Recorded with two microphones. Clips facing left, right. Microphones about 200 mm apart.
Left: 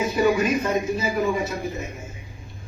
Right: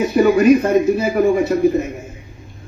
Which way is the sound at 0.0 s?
65° right (ahead or behind).